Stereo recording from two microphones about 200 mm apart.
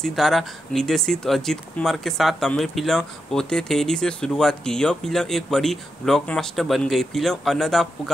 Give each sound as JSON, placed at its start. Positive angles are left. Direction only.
{"t": 0.0, "sound": "speech", "side_deg": 0}